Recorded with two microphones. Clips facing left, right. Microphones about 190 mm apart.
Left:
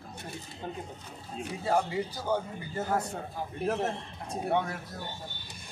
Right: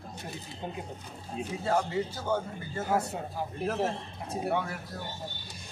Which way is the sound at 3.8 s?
5° right (ahead or behind).